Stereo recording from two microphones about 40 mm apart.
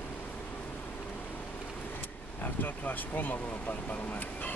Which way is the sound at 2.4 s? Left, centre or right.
Left.